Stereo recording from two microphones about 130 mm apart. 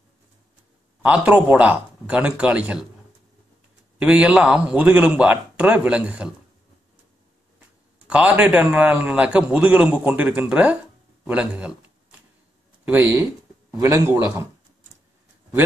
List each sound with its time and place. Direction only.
1.0 s a man's voice: 10° right (ahead or behind)
4.0 s a man's voice: 10° right (ahead or behind)
8.1 s a man's voice: 10° right (ahead or behind)
12.8 s a man's voice: 15° right (ahead or behind)